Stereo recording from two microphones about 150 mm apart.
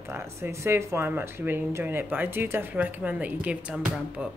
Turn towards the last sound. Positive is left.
turn(degrees=-5)  # may be behind; listen again after turning